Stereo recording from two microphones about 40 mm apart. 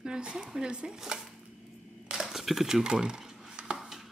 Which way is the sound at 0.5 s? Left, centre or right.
Centre.